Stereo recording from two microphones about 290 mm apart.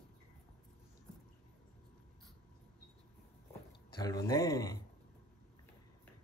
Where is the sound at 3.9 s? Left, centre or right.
Centre.